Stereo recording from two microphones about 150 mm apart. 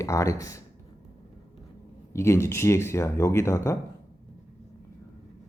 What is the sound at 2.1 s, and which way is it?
Speech, 20° left (ahead or behind).